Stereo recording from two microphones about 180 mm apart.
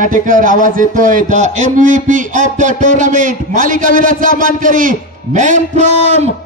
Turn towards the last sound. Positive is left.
turn(degrees=-40)  # may be behind; listen again after turning